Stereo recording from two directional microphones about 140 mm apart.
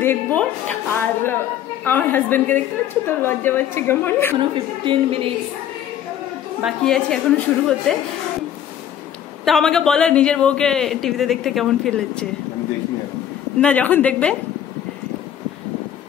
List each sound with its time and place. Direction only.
0.0 s a woman's voice: 15° left (ahead or behind)
1.9 s a woman's voice: 15° left (ahead or behind)
4.8 s a woman's voice: 40° right (ahead or behind)
6.6 s a man's voice: 5° left (ahead or behind)
9.4 s a man's voice: centre (ahead or behind)
13.6 s a woman's voice: 10° left (ahead or behind)